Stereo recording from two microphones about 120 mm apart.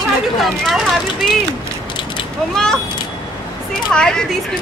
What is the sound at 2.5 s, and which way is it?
Speech, 5° left (ahead or behind).